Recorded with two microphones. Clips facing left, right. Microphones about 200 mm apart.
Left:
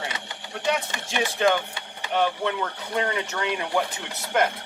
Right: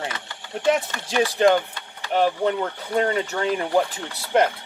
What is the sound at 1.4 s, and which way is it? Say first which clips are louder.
Speech: right 4 dB; 35° right (ahead or behind).